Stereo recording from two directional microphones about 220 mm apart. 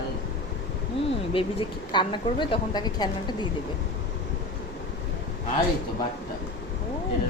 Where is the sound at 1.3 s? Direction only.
25° left (ahead or behind).